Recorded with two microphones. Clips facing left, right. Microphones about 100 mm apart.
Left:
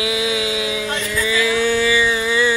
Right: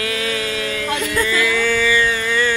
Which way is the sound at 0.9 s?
55° right (ahead or behind).